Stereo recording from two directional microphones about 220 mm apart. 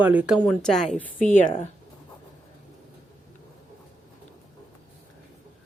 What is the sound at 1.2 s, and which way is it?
Speech, 35° left (ahead or behind).